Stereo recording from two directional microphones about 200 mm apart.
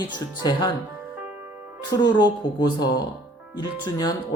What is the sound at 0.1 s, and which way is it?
Speech, 20° left (ahead or behind).